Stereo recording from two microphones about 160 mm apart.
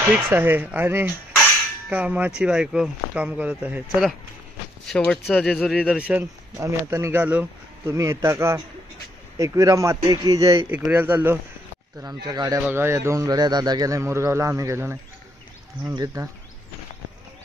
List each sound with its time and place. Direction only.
0.3 s speech: 15° right (ahead or behind)
4.8 s speech: 5° left (ahead or behind); by 10.7 s 20° right (ahead or behind)
10.7 s speech: 10° right (ahead or behind)
12.3 s speech: 25° right (ahead or behind)